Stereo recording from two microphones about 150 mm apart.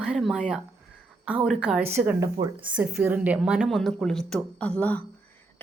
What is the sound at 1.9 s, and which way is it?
A woman's voice, 15° right (ahead or behind).